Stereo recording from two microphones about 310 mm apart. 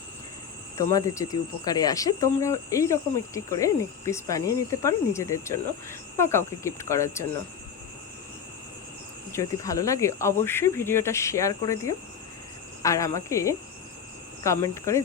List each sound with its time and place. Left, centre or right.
0.8 s speech: centre
9.3 s speech: centre